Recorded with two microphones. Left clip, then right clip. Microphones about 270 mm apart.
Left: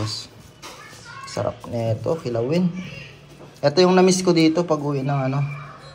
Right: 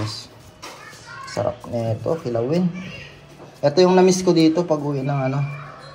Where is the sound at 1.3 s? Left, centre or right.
Centre.